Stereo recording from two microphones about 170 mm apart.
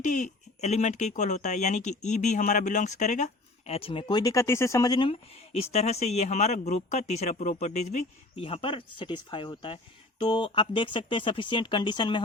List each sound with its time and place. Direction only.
0.0 s speech: 45° left (ahead or behind); by 12.2 s 30° left (ahead or behind)